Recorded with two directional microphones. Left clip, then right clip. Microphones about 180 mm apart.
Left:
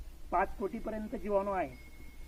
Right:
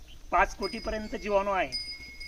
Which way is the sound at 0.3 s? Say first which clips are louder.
Right 6 dB; 25° right (ahead or behind).